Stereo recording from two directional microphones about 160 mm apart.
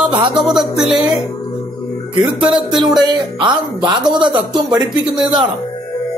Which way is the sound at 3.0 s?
30° right (ahead or behind).